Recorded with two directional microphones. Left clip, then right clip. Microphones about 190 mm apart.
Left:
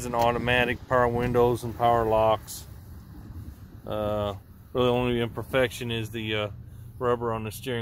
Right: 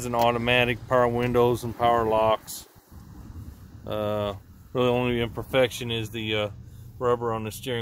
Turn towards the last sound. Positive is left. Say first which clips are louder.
# right 1 dB
turn(degrees=0)  # may be behind; listen again after turning